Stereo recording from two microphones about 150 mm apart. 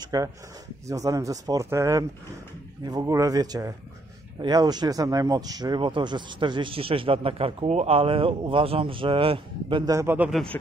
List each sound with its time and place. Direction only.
0.0 s speech: 25° right (ahead or behind)
9.9 s a man's voice: 15° right (ahead or behind)
10.5 s speech: 15° left (ahead or behind)